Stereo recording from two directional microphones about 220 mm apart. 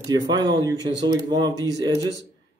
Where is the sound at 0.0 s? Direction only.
20° right (ahead or behind).